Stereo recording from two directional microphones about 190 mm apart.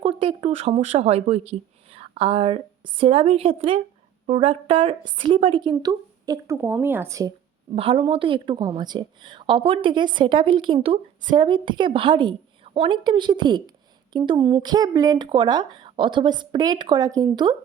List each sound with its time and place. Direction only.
0.0 s a woman's voice: 30° right (ahead or behind)
7.8 s a woman's voice: 30° right (ahead or behind)